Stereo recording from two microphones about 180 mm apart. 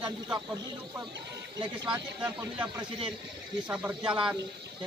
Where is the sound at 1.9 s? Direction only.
10° right (ahead or behind).